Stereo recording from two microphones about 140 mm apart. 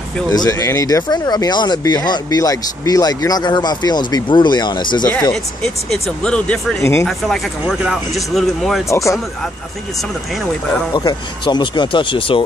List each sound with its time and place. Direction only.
0.3 s speech: 25° left (ahead or behind)
5.3 s speech: 5° left (ahead or behind)
6.8 s speech: 20° left (ahead or behind)
7.1 s speech: centre (ahead or behind)
8.8 s speech: 20° left (ahead or behind)
10.9 s speech: 30° left (ahead or behind)